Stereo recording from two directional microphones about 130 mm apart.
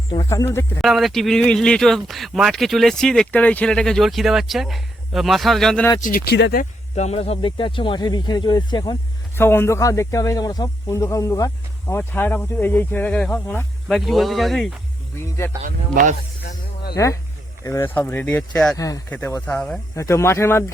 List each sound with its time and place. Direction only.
0.3 s speech: 20° left (ahead or behind)
0.8 s speech: centre (ahead or behind)
6.0 s speech: 90° left; by 9.0 s 35° left (ahead or behind)
9.3 s speech: 20° left (ahead or behind)
13.9 s speech: centre (ahead or behind)
15.6 s speech: 80° right
16.9 s speech: 25° left (ahead or behind); by 18.8 s 5° left (ahead or behind)
18.8 s speech: 25° left (ahead or behind)
19.2 s speech: 10° left (ahead or behind)
20.0 s speech: 20° left (ahead or behind)